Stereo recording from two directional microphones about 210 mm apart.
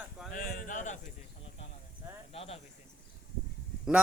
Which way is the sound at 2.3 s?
30° left (ahead or behind).